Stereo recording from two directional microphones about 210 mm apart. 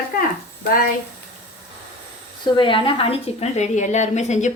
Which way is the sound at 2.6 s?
25° left (ahead or behind).